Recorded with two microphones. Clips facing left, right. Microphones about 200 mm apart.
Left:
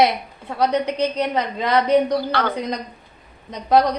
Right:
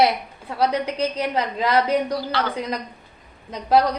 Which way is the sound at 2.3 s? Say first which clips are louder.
Left 2 dB; 55° left (ahead or behind).